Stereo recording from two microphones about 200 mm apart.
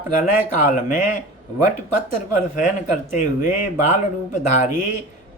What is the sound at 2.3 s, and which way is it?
A man's voice, 40° left (ahead or behind).